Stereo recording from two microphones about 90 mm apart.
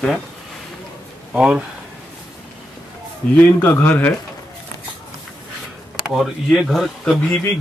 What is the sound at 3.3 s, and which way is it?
Speech, 15° left (ahead or behind).